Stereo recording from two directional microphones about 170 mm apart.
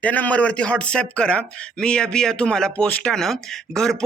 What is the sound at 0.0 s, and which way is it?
A man's voice, 10° left (ahead or behind).